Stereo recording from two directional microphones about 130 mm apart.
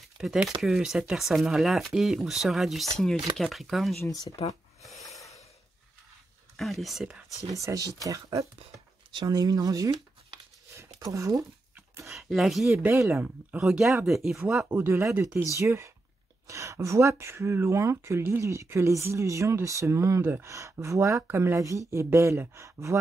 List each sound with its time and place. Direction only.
0.2 s speech: 5° right (ahead or behind)
4.0 s speech: 25° left (ahead or behind)
4.8 s snort: centre (ahead or behind)
6.5 s speech: centre (ahead or behind)
7.5 s speech: 25° right (ahead or behind)
8.7 s a sound: 30° right (ahead or behind)
12.1 s speech: centre (ahead or behind)
12.7 s speech: 20° right (ahead or behind)
13.6 s speech: 5° right (ahead or behind)
14.8 s speech: 20° right (ahead or behind)